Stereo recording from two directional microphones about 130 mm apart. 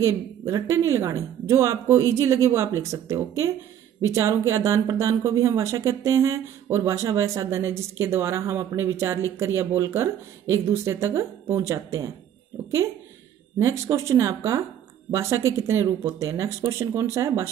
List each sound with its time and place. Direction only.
0.0 s a woman's voice: 25° right (ahead or behind)
13.6 s a woman's voice: 25° right (ahead or behind)